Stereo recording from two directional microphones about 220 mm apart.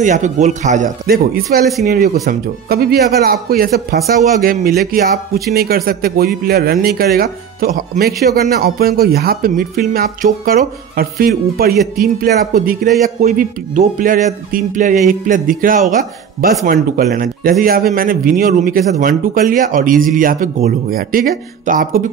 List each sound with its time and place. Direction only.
0.0 s speech: 35° right (ahead or behind)